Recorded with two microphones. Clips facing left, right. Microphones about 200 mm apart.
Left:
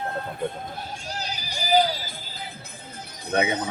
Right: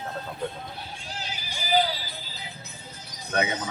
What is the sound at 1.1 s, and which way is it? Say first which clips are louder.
Music: left 3 dB; 40° left (ahead or behind).